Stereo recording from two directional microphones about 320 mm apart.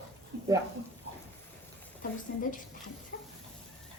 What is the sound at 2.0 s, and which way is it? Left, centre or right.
Speech, left.